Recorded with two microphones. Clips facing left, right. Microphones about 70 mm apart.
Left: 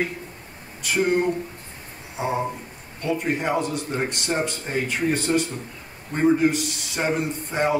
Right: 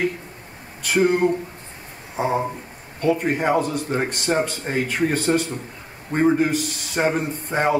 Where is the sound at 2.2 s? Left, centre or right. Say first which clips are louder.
Right 2 dB; centre.